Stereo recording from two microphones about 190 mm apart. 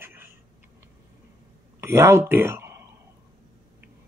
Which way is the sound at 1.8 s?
15° right (ahead or behind).